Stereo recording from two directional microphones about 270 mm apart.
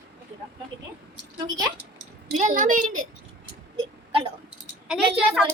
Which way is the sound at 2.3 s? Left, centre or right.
Right.